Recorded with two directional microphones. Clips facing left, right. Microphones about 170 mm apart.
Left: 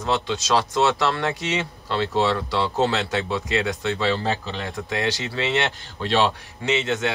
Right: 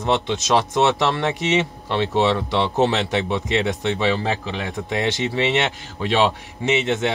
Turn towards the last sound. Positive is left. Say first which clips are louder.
# right 3 dB
turn(degrees=-20)  # may be behind; listen again after turning